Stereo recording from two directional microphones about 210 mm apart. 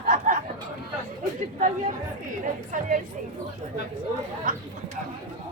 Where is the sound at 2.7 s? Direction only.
40° right (ahead or behind).